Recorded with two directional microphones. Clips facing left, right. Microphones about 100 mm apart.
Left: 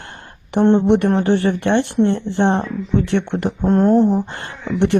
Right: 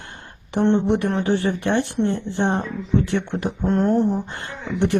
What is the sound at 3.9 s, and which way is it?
Speech, 90° left.